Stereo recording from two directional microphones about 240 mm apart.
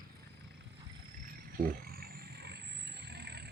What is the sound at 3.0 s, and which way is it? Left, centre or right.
Roaring cats, right.